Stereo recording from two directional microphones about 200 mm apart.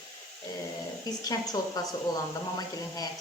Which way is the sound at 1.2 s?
20° left (ahead or behind).